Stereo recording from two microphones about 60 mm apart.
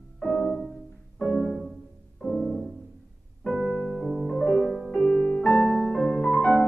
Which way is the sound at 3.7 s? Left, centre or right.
Centre.